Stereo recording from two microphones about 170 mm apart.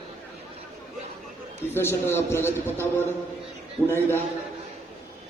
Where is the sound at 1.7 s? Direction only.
15° left (ahead or behind).